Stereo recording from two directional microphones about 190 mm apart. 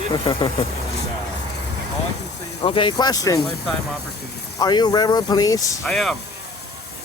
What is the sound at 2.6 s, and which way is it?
Speech, 25° left (ahead or behind).